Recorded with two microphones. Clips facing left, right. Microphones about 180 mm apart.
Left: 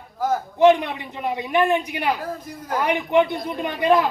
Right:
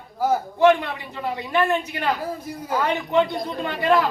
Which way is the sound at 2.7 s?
15° left (ahead or behind).